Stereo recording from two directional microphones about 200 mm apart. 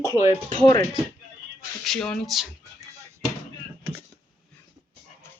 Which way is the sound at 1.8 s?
5° left (ahead or behind).